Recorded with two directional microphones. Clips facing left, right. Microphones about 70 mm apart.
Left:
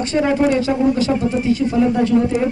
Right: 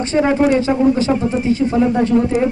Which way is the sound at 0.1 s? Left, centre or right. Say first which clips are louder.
Right 2 dB; right.